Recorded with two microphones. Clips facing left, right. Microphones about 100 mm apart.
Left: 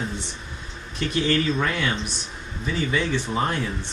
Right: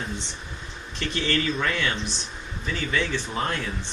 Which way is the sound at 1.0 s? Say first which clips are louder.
Left 4 dB; 15° left (ahead or behind).